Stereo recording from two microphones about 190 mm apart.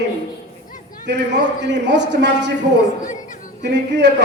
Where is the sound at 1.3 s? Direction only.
65° right (ahead or behind).